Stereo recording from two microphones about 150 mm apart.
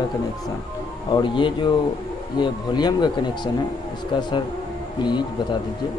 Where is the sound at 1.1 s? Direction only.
30° left (ahead or behind).